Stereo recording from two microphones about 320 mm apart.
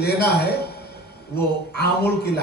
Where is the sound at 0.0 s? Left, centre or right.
Left.